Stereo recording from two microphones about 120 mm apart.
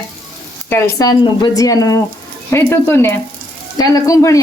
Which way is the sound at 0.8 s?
30° left (ahead or behind).